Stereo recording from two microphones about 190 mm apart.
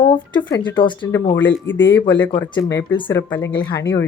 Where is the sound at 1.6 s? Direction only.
75° left (ahead or behind).